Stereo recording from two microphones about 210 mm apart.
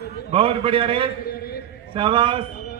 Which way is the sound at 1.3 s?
45° left (ahead or behind).